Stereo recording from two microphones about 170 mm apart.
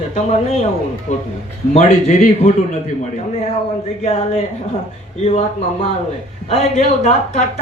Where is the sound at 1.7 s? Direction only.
40° left (ahead or behind).